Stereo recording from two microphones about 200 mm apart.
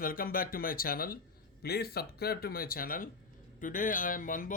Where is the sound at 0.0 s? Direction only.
45° left (ahead or behind).